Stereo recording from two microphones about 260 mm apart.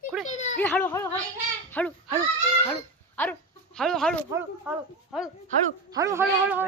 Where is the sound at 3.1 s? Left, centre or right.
Centre.